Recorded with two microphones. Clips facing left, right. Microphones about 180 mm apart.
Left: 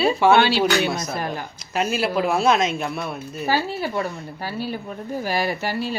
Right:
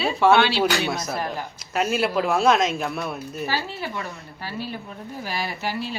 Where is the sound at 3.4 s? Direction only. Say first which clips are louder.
Left 6 dB; 40° left (ahead or behind).